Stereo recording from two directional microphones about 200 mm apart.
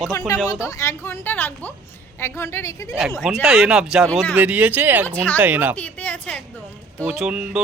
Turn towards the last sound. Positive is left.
turn(degrees=-5)  # may be behind; listen again after turning